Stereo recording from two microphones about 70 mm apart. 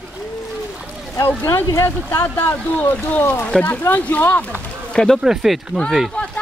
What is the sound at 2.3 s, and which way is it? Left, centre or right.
Speech, left.